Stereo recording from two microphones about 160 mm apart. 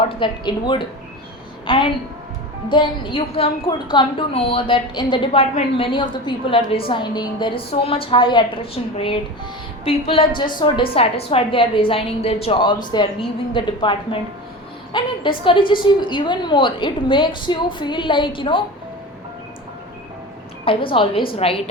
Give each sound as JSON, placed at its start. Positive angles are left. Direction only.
{"t": 0.2, "sound": "a woman's voice", "side_deg": 30}
{"t": 20.7, "sound": "a woman's voice", "side_deg": 35}